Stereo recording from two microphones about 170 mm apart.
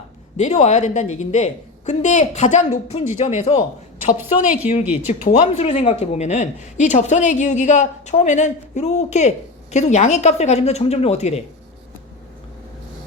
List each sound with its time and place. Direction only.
0.3 s a woman's voice: 45° left (ahead or behind)